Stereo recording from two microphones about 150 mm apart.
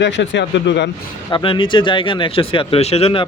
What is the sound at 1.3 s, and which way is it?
Speech, 35° left (ahead or behind).